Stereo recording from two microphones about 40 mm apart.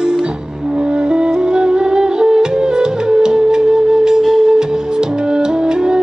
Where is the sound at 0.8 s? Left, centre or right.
Right.